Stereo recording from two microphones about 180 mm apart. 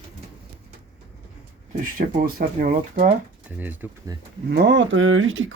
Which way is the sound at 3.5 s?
10° right (ahead or behind).